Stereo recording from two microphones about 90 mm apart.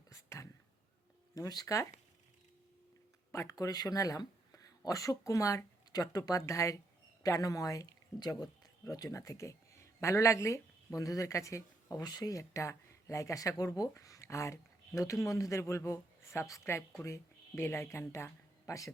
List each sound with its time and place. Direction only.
0.1 s whispering: 35° left (ahead or behind)
1.4 s speech: 45° left (ahead or behind)
3.5 s speech: 45° left (ahead or behind)